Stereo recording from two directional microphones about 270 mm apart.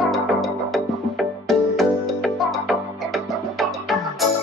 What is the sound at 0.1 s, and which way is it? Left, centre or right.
Music, centre.